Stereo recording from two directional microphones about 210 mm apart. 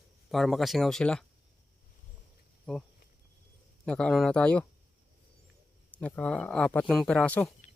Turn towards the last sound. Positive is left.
turn(degrees=5)  # may be behind; listen again after turning